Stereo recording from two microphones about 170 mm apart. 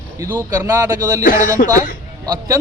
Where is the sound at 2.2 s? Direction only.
20° right (ahead or behind).